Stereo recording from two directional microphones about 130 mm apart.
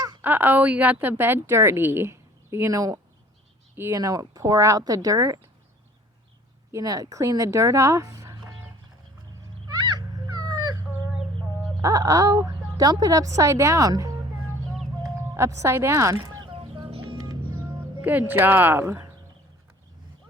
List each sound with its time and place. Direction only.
0.2 s a woman's voice: 15° right (ahead or behind)
6.7 s speech: 25° right (ahead or behind)
10.3 s dog: 30° right (ahead or behind)
11.8 s speech: 25° right (ahead or behind)
15.4 s speech: 20° right (ahead or behind)
16.5 s a sound: 40° right (ahead or behind)
18.0 s a woman's voice: 15° right (ahead or behind)